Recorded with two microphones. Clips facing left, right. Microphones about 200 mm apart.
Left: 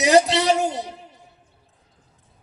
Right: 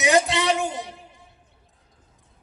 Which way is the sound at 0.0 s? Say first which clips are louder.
Left 4 dB; 40° left (ahead or behind).